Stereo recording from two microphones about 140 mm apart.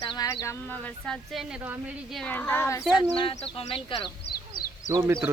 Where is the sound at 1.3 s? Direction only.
5° right (ahead or behind).